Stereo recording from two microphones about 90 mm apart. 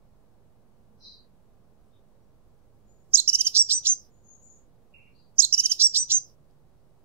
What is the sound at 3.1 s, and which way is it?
Chirp, 25° right (ahead or behind).